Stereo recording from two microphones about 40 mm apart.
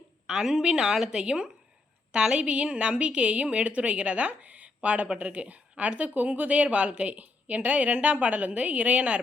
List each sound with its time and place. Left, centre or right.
0.3 s a woman's voice: centre; by 7.2 s right
7.2 s a woman's voice: right